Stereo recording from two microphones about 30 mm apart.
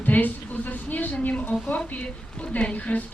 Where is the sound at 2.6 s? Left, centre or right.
Left.